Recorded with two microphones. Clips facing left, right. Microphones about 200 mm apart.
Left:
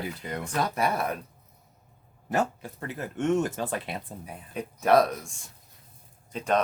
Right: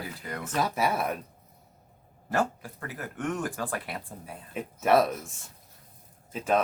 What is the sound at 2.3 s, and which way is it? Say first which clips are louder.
Speech: left 1 dB; 20° left (ahead or behind).